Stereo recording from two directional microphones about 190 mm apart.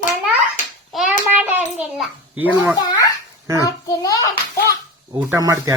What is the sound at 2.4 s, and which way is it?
Speech, 10° right (ahead or behind).